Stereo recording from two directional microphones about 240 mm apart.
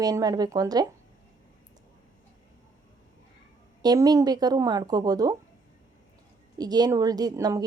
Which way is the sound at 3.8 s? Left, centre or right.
Centre.